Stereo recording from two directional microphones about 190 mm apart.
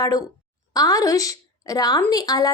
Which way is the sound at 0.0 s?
20° left (ahead or behind).